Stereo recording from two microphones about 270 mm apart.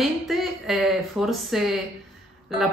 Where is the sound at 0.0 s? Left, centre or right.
Centre.